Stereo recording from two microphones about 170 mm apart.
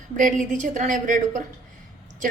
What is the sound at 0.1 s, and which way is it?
A woman's voice, 50° right (ahead or behind).